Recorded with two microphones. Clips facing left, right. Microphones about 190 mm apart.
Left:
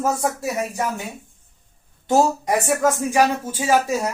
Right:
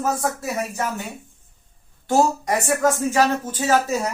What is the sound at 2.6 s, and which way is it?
Speech, 15° left (ahead or behind).